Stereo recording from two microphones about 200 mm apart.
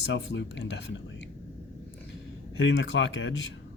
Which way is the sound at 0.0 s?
65° left (ahead or behind).